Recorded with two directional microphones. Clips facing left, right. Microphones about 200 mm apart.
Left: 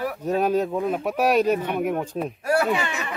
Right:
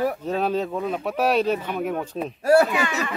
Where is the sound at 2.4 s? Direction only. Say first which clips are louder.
Right 5 dB; 40° right (ahead or behind).